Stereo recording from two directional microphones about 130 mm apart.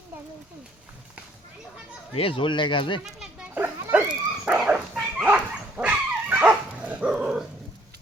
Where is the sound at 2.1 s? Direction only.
45° left (ahead or behind).